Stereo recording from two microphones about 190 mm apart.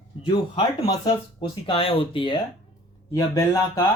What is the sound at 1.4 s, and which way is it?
Speech, 25° left (ahead or behind).